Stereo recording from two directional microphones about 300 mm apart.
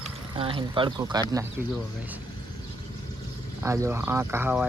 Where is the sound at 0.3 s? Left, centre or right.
Centre.